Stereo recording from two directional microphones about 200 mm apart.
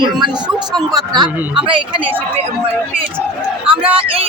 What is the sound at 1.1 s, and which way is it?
Speech, 20° right (ahead or behind).